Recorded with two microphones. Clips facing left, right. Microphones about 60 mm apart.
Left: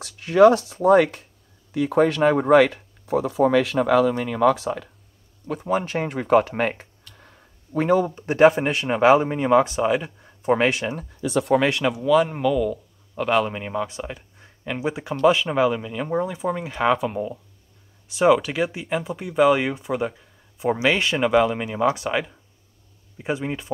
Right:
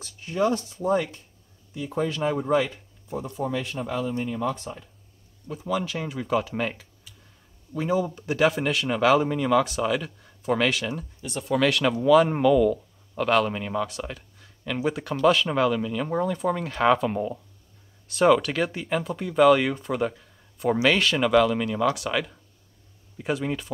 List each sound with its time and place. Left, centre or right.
0.0 s speech: left
5.7 s speech: left
7.2 s a sound: left
8.1 s speech: left
12.0 s speech: centre; by 23.7 s left